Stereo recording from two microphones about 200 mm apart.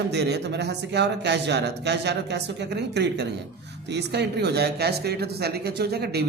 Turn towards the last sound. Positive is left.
turn(degrees=-55)  # may be behind; listen again after turning